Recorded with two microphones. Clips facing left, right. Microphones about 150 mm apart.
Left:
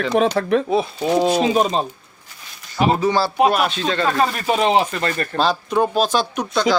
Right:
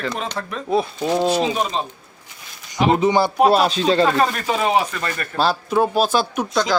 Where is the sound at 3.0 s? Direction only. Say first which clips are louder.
Right 2 dB; 20° right (ahead or behind).